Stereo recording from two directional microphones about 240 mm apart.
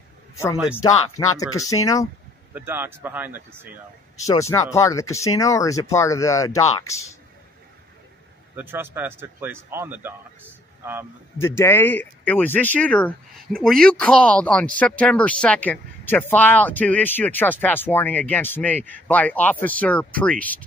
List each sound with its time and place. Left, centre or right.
1.2 s speech: centre
2.5 s speech: centre
4.2 s speech: centre
8.5 s speech: centre
11.3 s speech: centre